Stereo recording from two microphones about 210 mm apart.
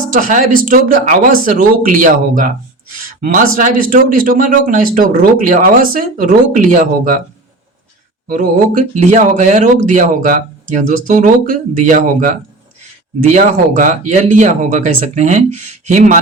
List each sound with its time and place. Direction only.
0.1 s speech: 40° right (ahead or behind)
8.3 s speech: 40° right (ahead or behind)
13.3 s speech: 35° right (ahead or behind)